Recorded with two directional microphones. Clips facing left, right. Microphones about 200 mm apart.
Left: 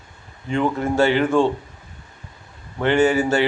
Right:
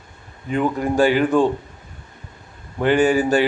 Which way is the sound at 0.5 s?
15° right (ahead or behind).